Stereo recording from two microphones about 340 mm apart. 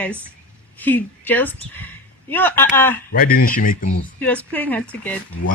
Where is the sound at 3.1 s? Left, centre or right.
Left.